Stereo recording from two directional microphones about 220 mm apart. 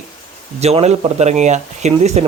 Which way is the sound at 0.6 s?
30° right (ahead or behind).